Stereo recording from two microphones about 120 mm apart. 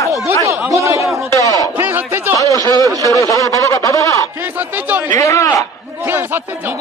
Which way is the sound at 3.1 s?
25° left (ahead or behind).